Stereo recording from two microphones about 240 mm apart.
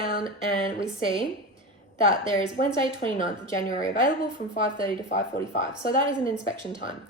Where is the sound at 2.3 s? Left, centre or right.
Left.